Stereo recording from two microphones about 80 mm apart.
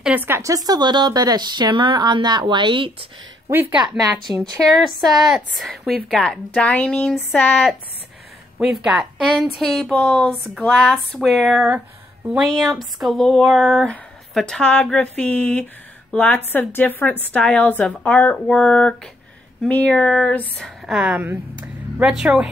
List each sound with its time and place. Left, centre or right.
0.1 s speech: right
0.4 s a woman's voice: right
4.4 s a woman's voice: centre
8.5 s speech: centre
9.2 s a woman's voice: centre
9.9 s a woman's voice: centre
10.6 s a woman's voice: centre
20.8 s speech: centre
21.2 s speech: right
22.1 s speech: centre